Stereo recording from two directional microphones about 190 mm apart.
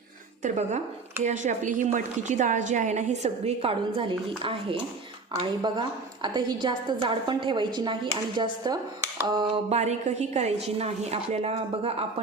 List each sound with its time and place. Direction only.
0.4 s a woman's voice: 40° right (ahead or behind)
5.4 s a woman's voice: 25° right (ahead or behind)
9.7 s a woman's voice: 35° right (ahead or behind)